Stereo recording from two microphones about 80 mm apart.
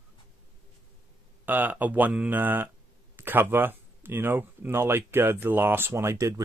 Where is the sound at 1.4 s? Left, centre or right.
Right.